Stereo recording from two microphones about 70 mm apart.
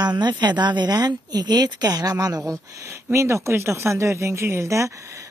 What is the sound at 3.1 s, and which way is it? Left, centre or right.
Speech, right.